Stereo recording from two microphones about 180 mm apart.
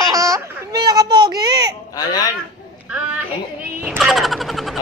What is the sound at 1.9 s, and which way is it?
Speech, 20° left (ahead or behind).